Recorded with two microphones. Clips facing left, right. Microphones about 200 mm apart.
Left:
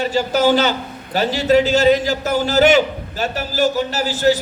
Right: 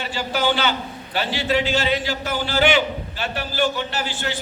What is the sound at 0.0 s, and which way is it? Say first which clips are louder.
A man's voice: left 7 dB; 40° left (ahead or behind).